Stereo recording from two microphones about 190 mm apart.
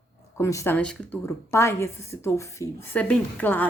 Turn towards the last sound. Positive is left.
turn(degrees=10)  # may be behind; listen again after turning